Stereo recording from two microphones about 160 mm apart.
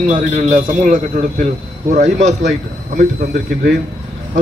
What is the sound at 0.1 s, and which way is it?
A man's voice, 50° right (ahead or behind).